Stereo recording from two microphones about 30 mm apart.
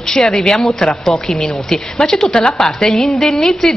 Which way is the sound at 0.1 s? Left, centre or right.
Centre.